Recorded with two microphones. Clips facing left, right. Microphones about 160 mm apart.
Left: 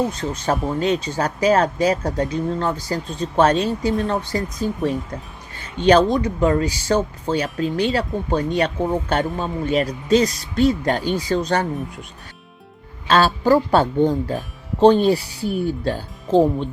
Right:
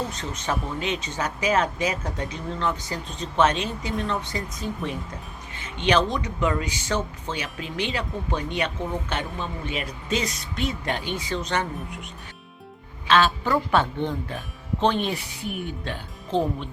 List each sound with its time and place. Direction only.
0.1 s speech: 35° left (ahead or behind)
13.1 s speech: 40° left (ahead or behind)